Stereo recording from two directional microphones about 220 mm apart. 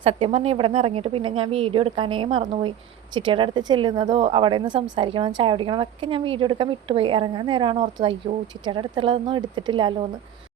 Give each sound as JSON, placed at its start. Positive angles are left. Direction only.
{"t": 0.0, "sound": "a woman's voice", "side_deg": -25}